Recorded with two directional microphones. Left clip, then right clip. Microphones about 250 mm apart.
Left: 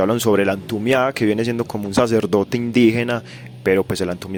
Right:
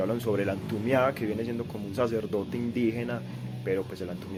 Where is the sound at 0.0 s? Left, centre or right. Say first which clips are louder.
Left 12 dB; left.